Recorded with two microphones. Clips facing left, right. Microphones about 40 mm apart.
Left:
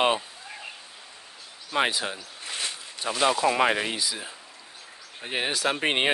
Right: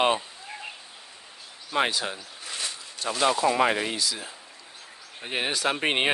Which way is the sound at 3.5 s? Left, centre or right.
Centre.